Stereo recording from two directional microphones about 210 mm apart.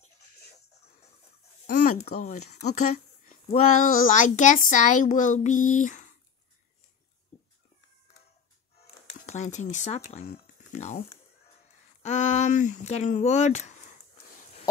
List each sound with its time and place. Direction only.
1.7 s speech: 40° left (ahead or behind)
8.7 s music: 35° left (ahead or behind)
10.2 s speech: 50° left (ahead or behind)
10.7 s speech: 35° left (ahead or behind)